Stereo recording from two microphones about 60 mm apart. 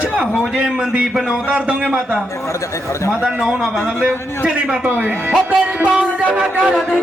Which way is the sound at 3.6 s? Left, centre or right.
Centre.